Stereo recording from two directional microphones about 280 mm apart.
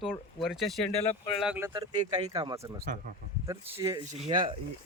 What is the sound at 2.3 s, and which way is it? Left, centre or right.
Speech, centre.